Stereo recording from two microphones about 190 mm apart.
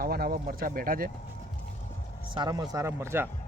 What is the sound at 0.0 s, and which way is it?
Speech, 50° right (ahead or behind).